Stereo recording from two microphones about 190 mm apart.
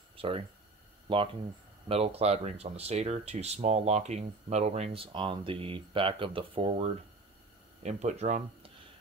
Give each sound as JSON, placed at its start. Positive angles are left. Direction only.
{"t": 0.1, "sound": "a sound", "side_deg": -30}
{"t": 1.0, "sound": "speech", "side_deg": -30}
{"t": 7.8, "sound": "speech", "side_deg": -35}